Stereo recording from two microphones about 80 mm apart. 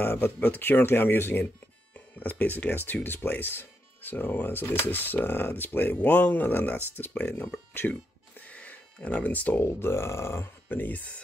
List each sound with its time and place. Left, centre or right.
0.0 s speech: left
8.4 s a sound: centre
9.7 s speech: left